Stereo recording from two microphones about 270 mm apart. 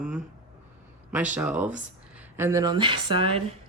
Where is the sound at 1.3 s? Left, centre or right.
Centre.